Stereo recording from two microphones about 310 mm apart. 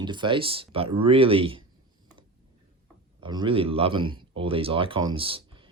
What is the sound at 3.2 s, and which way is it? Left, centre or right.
Speech, centre.